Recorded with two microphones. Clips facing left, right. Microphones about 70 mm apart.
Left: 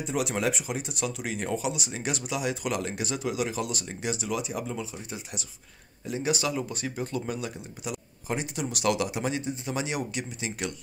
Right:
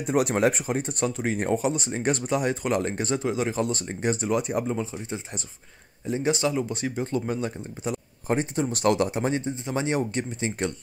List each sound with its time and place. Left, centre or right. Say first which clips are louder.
0.0 s speech: right 6 dB; right
4.6 s speech: right 6 dB; right